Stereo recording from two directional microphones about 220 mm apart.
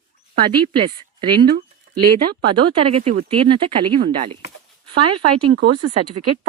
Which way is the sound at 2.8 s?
25° right (ahead or behind).